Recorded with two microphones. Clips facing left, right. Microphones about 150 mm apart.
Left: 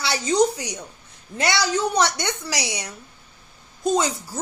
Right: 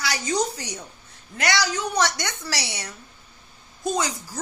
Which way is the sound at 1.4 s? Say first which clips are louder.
Left 3 dB; 25° left (ahead or behind).